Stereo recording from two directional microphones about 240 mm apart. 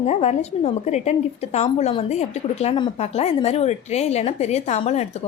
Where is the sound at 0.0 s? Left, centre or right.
Left.